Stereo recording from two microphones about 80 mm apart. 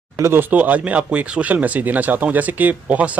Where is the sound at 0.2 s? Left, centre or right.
Right.